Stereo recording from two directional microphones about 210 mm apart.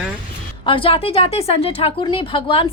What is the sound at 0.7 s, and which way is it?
Speech, 25° left (ahead or behind).